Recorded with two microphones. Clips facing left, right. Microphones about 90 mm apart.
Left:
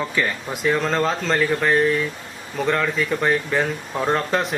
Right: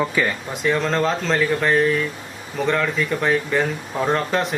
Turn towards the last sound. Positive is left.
turn(degrees=0)  # may be behind; listen again after turning